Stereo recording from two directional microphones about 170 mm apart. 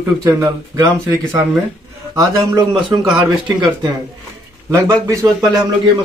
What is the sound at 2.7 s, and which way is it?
Speech, 30° right (ahead or behind).